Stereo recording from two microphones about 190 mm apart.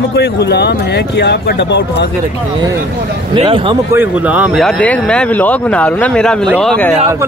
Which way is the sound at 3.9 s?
10° right (ahead or behind).